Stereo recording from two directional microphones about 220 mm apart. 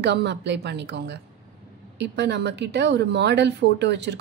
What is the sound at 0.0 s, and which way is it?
A woman's voice, 50° right (ahead or behind).